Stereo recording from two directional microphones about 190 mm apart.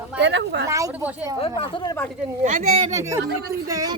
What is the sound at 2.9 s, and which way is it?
Speech, 15° right (ahead or behind).